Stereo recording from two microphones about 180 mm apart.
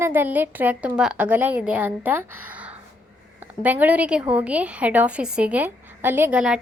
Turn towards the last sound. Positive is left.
turn(degrees=-5)  # may be behind; listen again after turning